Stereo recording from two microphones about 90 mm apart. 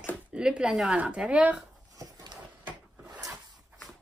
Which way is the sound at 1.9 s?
40° right (ahead or behind).